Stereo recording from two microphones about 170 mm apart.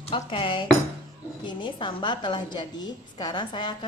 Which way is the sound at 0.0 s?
30° left (ahead or behind).